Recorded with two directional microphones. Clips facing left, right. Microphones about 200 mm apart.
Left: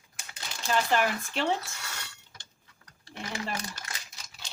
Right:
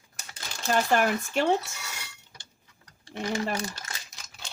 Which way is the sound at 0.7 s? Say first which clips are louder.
Right 3 dB; 45° right (ahead or behind).